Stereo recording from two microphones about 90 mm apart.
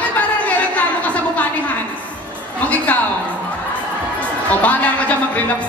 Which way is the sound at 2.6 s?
15° left (ahead or behind).